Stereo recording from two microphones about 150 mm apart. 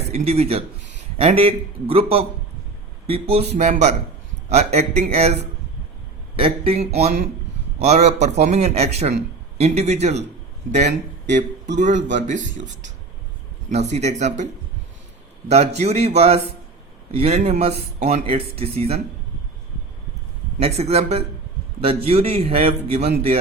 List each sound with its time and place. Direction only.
0.1 s a man's voice: 45° right (ahead or behind)
3.6 s speech: 50° right (ahead or behind)
6.4 s speech: 40° right (ahead or behind); by 12.6 s 55° right (ahead or behind)
13.7 s speech: 50° right (ahead or behind)
15.4 s a man's voice: 45° right (ahead or behind)
20.6 s a man's voice: 45° right (ahead or behind)